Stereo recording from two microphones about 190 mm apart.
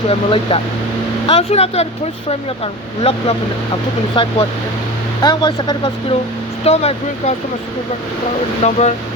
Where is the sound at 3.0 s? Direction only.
30° left (ahead or behind).